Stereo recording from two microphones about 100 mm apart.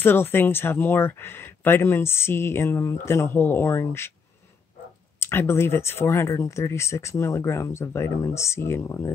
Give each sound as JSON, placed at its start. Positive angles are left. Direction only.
{"t": 0.0, "sound": "speech", "side_deg": 20}
{"t": 5.2, "sound": "speech", "side_deg": 25}